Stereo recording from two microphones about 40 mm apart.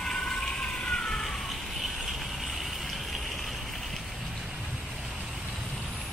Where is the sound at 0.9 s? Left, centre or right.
Centre.